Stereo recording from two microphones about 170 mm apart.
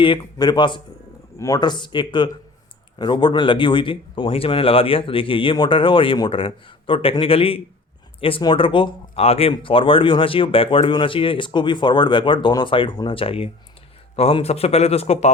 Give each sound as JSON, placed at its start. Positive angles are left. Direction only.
{"t": 0.0, "sound": "speech", "side_deg": 25}